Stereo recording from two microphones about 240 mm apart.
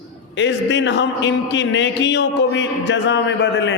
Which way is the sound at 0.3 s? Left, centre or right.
Left.